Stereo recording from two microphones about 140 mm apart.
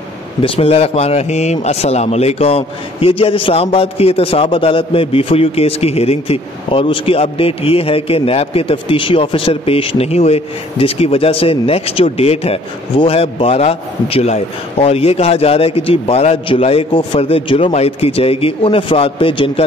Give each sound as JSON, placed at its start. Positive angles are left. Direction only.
{"t": 0.4, "sound": "a man's voice", "side_deg": 45}